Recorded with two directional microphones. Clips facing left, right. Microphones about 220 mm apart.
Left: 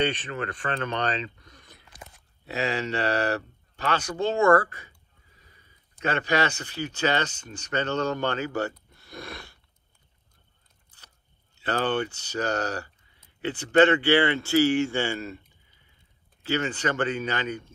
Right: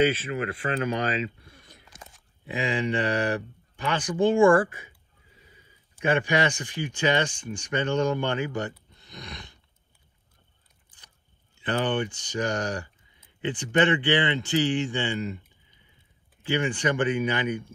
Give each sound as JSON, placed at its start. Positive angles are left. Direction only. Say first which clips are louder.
{"t": 0.5, "sound": "speech", "louder": "right 3 dB", "side_deg": -10}
{"t": 8.9, "sound": "a sound", "louder": "left 3 dB", "side_deg": -20}
{"t": 11.5, "sound": "speech", "louder": "even", "side_deg": -15}